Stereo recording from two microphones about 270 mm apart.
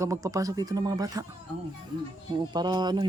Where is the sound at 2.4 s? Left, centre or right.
Centre.